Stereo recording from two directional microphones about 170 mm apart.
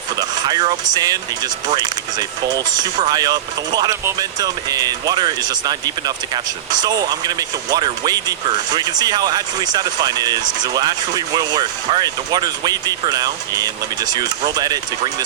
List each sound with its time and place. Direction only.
0.2 s speech: 25° right (ahead or behind)